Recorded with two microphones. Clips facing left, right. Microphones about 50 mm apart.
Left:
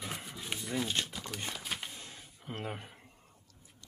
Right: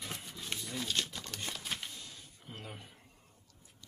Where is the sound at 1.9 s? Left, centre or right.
Left.